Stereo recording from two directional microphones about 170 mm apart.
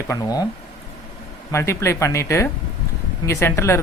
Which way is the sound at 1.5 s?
15° left (ahead or behind).